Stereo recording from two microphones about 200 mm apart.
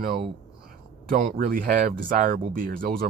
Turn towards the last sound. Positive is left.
turn(degrees=-45)  # may be behind; listen again after turning